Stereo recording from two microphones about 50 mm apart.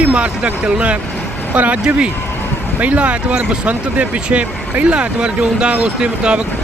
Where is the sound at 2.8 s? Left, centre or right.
Right.